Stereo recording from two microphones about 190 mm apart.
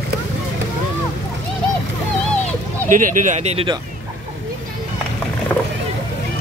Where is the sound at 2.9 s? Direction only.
45° right (ahead or behind).